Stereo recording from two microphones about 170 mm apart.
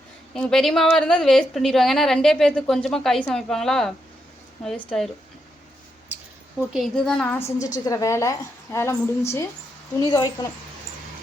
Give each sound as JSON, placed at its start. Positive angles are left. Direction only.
{"t": 0.3, "sound": "a woman's voice", "side_deg": 5}
{"t": 6.7, "sound": "a woman's voice", "side_deg": 0}